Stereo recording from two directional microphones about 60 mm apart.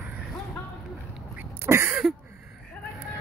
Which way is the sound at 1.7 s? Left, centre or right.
Right.